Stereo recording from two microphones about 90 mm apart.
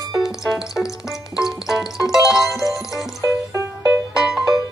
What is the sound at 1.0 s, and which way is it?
Music, 5° right (ahead or behind).